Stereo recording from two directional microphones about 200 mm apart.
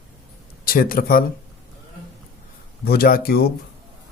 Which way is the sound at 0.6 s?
45° left (ahead or behind).